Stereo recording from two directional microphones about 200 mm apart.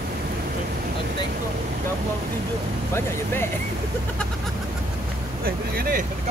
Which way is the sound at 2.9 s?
10° left (ahead or behind).